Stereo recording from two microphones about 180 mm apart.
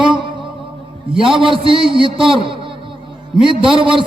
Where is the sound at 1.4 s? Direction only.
30° right (ahead or behind).